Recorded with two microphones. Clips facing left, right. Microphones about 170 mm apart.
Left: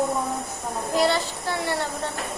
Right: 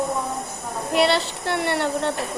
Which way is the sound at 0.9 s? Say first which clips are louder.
Right 3 dB; 70° right (ahead or behind).